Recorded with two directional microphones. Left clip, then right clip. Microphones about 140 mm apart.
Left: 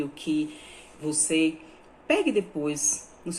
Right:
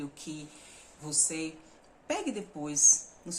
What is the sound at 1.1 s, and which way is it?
Speech, 35° right (ahead or behind).